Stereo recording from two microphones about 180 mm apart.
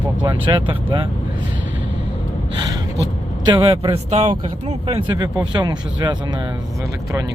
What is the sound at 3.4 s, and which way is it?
Speech, 30° right (ahead or behind).